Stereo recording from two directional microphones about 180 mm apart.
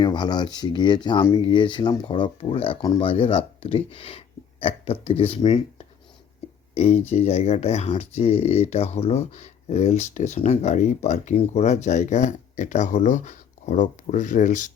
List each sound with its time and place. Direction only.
0.0 s speech: 25° left (ahead or behind); by 14.7 s 45° left (ahead or behind)